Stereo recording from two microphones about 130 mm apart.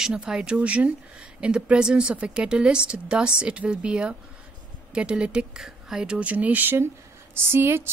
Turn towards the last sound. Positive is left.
turn(degrees=-20)  # may be behind; listen again after turning